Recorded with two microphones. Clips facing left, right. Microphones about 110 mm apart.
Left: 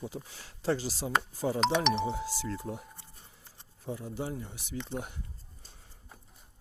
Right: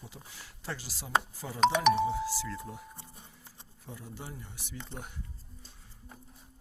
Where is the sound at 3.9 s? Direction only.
20° left (ahead or behind).